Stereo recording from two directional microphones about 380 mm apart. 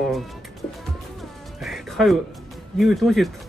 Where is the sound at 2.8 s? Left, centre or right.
Centre.